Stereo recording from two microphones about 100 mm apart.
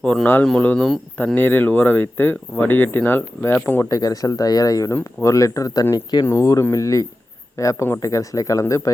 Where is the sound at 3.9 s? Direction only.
35° left (ahead or behind).